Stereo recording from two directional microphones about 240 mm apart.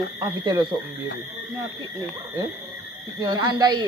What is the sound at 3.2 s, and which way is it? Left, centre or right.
Speech, centre.